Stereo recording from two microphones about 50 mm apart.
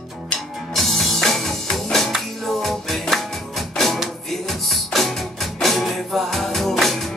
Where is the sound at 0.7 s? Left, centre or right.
Centre.